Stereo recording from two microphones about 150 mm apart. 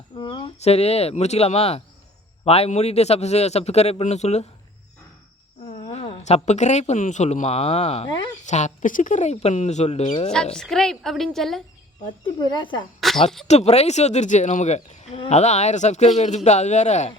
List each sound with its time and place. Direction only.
0.2 s a sound: 30° left (ahead or behind)
0.6 s speech: 40° left (ahead or behind)
5.6 s speech: 40° left (ahead or behind)
10.3 s a woman's voice: 5° left (ahead or behind)
12.0 s speech: 35° left (ahead or behind)
13.0 s a sound: centre (ahead or behind)
13.5 s speech: 45° left (ahead or behind)